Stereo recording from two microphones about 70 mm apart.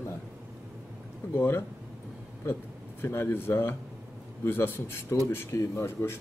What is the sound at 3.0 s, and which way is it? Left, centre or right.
Speech, left.